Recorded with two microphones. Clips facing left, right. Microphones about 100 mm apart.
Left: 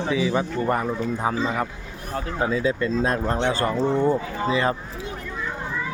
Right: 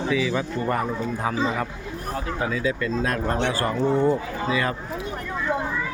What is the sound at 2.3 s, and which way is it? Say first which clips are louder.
Speech: left 4 dB; 30° left (ahead or behind).